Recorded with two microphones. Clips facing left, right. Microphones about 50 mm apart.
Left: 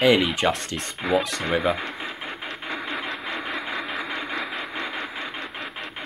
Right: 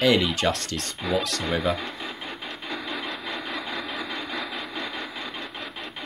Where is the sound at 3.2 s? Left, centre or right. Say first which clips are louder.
Left 2 dB; left.